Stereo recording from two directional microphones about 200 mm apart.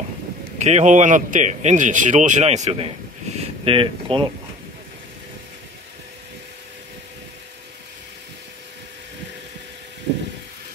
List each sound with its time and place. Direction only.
0.6 s speech: 35° right (ahead or behind)